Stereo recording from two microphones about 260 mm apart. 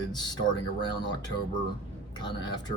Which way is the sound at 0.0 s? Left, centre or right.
Centre.